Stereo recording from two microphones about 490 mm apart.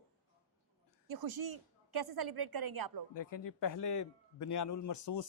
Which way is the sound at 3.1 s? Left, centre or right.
Left.